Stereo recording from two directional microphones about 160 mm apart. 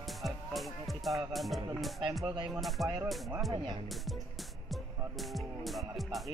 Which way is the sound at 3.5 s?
25° right (ahead or behind).